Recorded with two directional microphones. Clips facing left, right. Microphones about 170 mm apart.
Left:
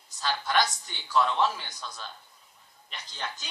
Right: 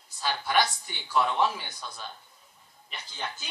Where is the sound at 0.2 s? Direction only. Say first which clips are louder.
Right 1 dB; 10° right (ahead or behind).